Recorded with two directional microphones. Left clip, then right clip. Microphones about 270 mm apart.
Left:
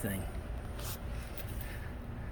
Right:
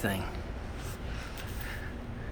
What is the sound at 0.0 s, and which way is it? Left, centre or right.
Speech, centre.